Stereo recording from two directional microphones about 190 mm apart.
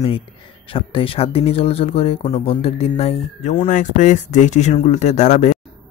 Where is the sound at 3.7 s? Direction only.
40° left (ahead or behind).